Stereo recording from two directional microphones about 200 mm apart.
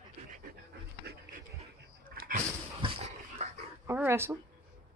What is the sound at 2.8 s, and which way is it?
Dog, 30° right (ahead or behind).